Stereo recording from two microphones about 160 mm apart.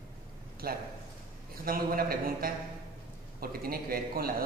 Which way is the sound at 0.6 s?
70° right (ahead or behind).